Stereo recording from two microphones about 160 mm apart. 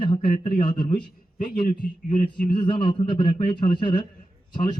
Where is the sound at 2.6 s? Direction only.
30° left (ahead or behind).